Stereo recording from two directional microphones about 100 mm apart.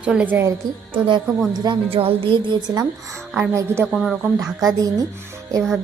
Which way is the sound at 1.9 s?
65° right (ahead or behind).